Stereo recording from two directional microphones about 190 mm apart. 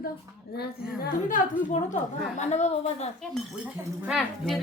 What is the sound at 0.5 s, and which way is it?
Speech, 55° left (ahead or behind).